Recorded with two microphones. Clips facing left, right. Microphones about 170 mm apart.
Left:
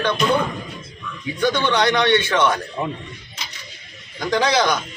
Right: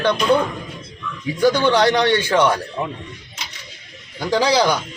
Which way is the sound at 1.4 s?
35° right (ahead or behind).